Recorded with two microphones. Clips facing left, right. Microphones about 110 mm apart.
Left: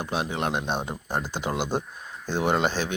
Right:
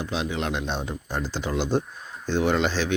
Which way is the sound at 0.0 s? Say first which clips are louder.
Even; 50° left (ahead or behind).